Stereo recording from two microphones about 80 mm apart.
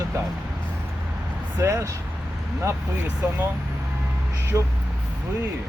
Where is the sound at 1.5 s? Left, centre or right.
Right.